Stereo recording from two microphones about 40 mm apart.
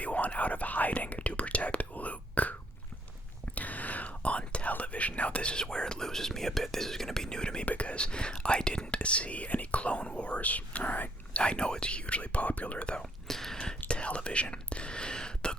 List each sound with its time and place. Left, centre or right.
0.0 s whispering: left
7.6 s whispering: left
11.3 s whispering: left
13.0 s whispering: centre
13.6 s whispering: left